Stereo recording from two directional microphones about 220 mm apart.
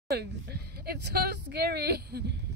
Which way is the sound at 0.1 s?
50° right (ahead or behind).